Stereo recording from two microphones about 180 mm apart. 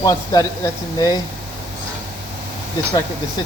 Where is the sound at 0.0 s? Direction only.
20° left (ahead or behind).